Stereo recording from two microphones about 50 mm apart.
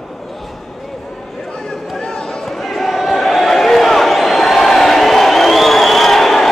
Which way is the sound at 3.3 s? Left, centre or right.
Centre.